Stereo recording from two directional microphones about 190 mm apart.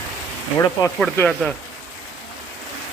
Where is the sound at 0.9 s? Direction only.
5° left (ahead or behind).